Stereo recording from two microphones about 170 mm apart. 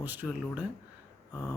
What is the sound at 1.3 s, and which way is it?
Speech, 20° left (ahead or behind).